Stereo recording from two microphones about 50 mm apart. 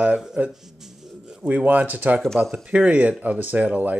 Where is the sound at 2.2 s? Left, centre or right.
Centre.